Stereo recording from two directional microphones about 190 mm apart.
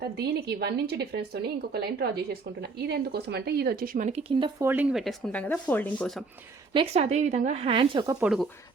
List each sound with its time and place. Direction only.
0.0 s speech: 55° right (ahead or behind); by 4.5 s 25° right (ahead or behind)
4.6 s speech: 10° right (ahead or behind)
6.7 s speech: 35° right (ahead or behind)
8.2 s speech: centre (ahead or behind)